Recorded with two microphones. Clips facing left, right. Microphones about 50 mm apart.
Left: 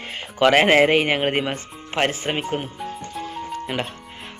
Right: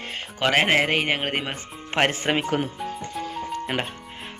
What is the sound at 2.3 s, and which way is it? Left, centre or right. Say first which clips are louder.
Speech: right 2 dB; right.